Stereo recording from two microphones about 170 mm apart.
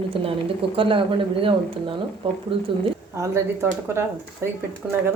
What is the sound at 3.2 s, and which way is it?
Speech, 15° right (ahead or behind).